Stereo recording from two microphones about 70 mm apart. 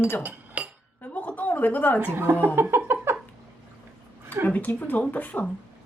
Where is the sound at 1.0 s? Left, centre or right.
Left.